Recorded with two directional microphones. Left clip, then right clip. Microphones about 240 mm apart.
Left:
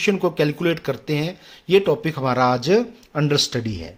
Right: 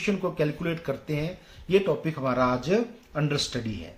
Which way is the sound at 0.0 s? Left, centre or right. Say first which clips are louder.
Left 8 dB; left.